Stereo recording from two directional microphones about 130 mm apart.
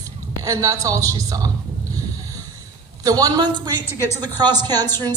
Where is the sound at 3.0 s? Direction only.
30° right (ahead or behind).